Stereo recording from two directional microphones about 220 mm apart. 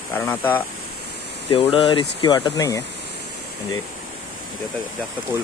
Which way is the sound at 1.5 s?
25° left (ahead or behind).